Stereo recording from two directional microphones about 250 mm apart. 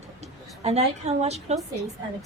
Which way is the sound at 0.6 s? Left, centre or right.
Right.